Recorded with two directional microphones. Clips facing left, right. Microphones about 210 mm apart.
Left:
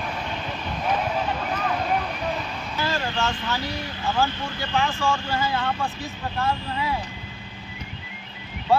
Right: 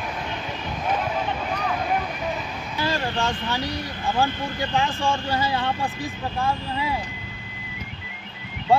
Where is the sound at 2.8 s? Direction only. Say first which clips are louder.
Right 1 dB; 15° right (ahead or behind).